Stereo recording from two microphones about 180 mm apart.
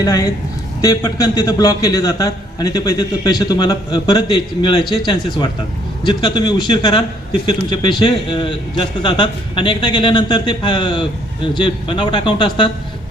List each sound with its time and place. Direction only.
0.0 s a man's voice: 20° left (ahead or behind)